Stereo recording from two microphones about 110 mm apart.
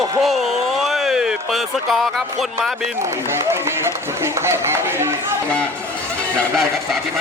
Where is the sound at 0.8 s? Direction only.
5° right (ahead or behind).